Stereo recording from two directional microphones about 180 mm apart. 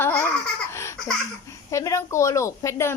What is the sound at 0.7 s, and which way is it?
Laughter, 15° left (ahead or behind).